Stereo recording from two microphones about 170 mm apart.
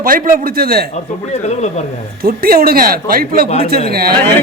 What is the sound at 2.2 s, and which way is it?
A man's voice, 60° right (ahead or behind).